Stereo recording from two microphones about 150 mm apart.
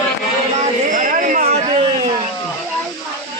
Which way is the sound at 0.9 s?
60° right (ahead or behind).